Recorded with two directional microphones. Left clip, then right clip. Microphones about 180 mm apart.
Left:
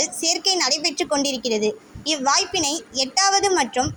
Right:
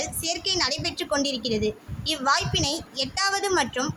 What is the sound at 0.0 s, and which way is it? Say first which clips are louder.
A woman's voice: left 6 dB; 15° left (ahead or behind).